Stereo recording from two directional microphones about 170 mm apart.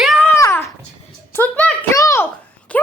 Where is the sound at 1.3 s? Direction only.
10° left (ahead or behind).